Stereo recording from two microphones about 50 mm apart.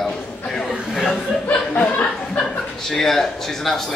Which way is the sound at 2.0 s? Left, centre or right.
Centre.